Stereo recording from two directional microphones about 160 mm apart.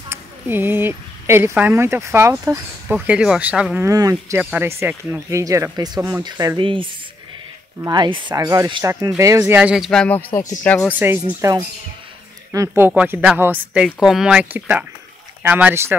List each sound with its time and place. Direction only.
0.1 s speech: 15° right (ahead or behind)
3.8 s speech: 20° right (ahead or behind)
9.6 s speech: 5° right (ahead or behind)
9.8 s speech: 5° left (ahead or behind)
10.9 s speech: 15° right (ahead or behind)